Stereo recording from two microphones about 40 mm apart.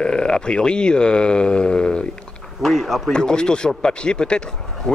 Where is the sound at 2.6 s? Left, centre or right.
Centre.